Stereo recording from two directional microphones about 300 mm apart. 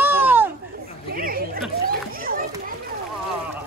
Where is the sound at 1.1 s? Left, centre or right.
Right.